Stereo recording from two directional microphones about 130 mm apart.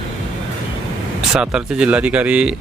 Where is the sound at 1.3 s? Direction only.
5° right (ahead or behind).